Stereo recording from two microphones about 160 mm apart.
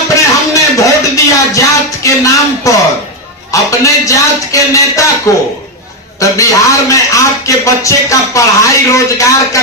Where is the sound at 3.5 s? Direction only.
20° left (ahead or behind).